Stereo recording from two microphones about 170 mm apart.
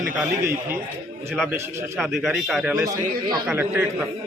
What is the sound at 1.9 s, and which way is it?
A man's voice, centre (ahead or behind).